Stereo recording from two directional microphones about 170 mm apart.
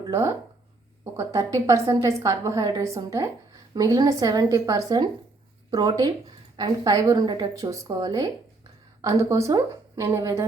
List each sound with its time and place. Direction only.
0.1 s a woman's voice: 15° right (ahead or behind)